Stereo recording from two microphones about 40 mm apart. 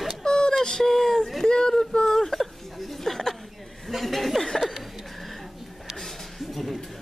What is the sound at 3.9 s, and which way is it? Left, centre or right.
Chuckle, centre.